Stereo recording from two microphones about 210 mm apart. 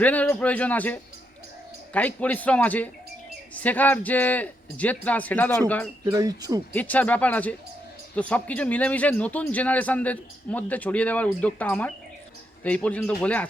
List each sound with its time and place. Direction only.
0.0 s a man's voice: 5° left (ahead or behind)
6.1 s speech: 15° right (ahead or behind)
6.7 s a man's voice: 5° left (ahead or behind)